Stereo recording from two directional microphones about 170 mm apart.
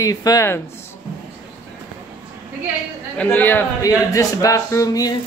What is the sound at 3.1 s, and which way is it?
Speech, 10° left (ahead or behind).